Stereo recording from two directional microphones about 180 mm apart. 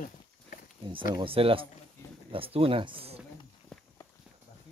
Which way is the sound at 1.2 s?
30° right (ahead or behind).